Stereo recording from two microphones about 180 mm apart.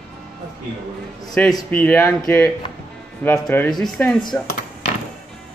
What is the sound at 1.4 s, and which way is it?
Speech, 10° left (ahead or behind).